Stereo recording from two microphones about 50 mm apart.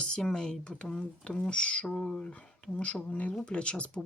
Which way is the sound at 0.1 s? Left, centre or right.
Centre.